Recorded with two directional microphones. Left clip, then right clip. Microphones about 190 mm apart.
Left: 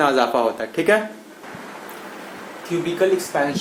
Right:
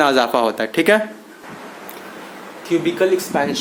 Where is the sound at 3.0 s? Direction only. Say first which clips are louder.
Left 2 dB; 45° right (ahead or behind).